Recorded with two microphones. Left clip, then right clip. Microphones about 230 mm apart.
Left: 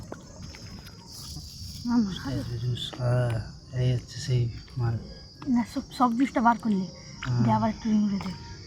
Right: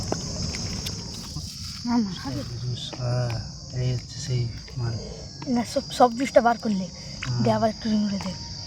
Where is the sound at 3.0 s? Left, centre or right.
Left.